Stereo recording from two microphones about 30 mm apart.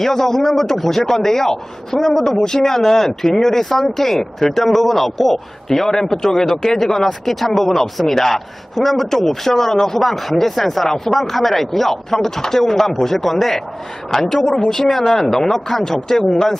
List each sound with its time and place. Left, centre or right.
0.0 s speech: centre
5.6 s speech: centre
11.1 s speech: centre